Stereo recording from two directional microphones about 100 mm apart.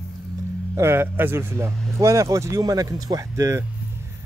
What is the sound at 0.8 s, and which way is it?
A man's voice, 25° right (ahead or behind).